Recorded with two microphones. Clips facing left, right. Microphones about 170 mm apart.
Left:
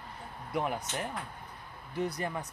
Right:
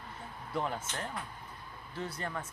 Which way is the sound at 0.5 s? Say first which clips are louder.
Left 3 dB; 15° left (ahead or behind).